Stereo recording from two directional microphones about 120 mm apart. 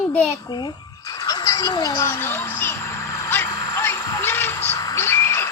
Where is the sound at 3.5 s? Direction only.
35° left (ahead or behind).